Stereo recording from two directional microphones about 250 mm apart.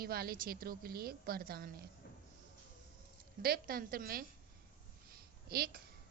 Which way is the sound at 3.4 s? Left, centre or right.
Right.